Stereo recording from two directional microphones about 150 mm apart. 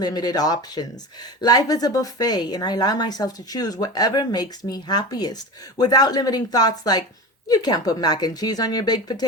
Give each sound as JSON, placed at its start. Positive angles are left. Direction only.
{"t": 0.0, "sound": "speech", "side_deg": 25}